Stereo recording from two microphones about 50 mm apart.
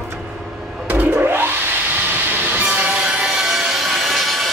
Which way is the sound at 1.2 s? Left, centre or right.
Right.